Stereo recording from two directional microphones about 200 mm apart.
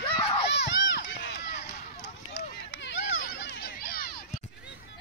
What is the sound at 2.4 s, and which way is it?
Run, 60° left (ahead or behind).